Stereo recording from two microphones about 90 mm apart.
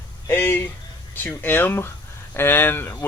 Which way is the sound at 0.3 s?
25° left (ahead or behind).